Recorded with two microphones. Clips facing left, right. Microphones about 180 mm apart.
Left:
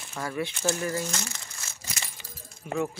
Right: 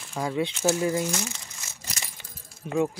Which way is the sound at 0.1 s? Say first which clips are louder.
Right 4 dB; 15° right (ahead or behind).